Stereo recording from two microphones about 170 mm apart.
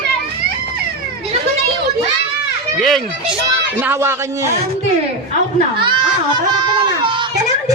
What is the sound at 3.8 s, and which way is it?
Speech, 15° right (ahead or behind).